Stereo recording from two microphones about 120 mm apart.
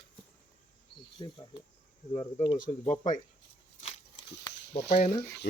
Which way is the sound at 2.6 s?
80° left.